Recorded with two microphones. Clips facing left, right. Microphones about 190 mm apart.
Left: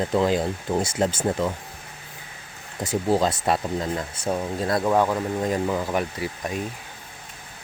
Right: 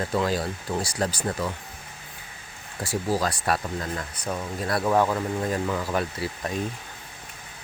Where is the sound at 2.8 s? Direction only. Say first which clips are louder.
Left 4 dB; 20° left (ahead or behind).